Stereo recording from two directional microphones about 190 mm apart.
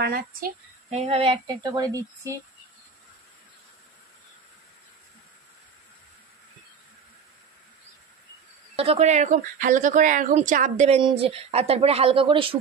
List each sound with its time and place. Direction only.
0.0 s a child's voice: 50° right (ahead or behind)
0.8 s speech: 30° right (ahead or behind)
8.7 s speech: 30° right (ahead or behind)
11.0 s speech: 30° right (ahead or behind)